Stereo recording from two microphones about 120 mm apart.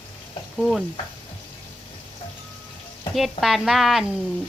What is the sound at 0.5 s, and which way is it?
Stir, centre (ahead or behind).